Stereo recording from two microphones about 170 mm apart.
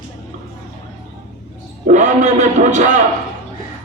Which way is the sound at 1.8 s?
45° right (ahead or behind).